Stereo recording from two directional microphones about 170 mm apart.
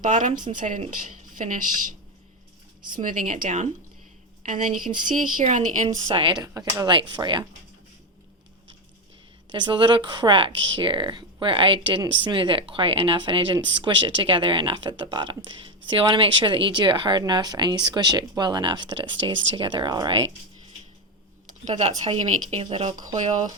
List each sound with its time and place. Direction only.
0.0 s a woman's voice: 50° right (ahead or behind)
2.9 s a woman's voice: 50° right (ahead or behind)
6.1 s speech: 30° right (ahead or behind)
9.5 s speech: 25° right (ahead or behind)
21.4 s speech: 40° right (ahead or behind)